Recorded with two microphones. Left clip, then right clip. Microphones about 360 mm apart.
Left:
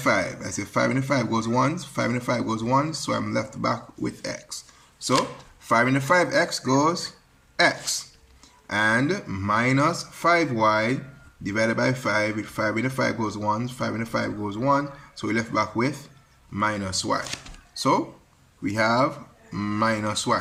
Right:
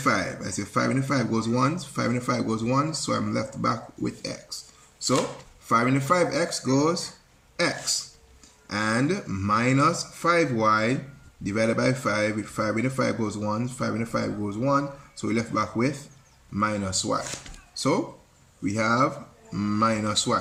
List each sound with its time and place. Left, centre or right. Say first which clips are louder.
0.0 s speech: left 2 dB; centre
5.6 s speech: left 2 dB; centre
8.6 s speech: left 4 dB; left